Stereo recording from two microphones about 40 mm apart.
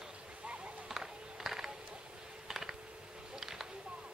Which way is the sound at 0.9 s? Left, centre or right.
Centre.